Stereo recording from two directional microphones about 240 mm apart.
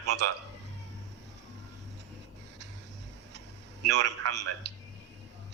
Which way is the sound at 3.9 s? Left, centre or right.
Right.